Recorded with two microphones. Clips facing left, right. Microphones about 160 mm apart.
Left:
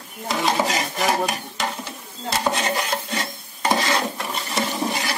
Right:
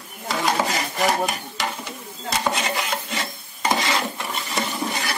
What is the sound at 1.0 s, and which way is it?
Speech, centre (ahead or behind).